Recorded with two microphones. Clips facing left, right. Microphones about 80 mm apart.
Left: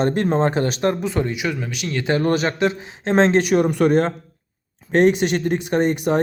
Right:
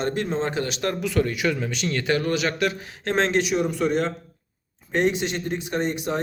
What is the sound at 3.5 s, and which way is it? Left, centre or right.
Speech, left.